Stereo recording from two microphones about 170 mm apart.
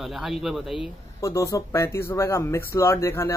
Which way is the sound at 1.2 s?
20° left (ahead or behind).